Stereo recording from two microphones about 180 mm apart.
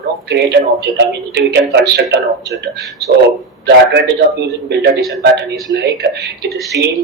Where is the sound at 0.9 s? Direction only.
70° right (ahead or behind).